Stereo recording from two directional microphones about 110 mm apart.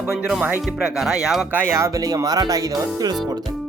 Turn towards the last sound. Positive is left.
turn(degrees=-35)  # may be behind; listen again after turning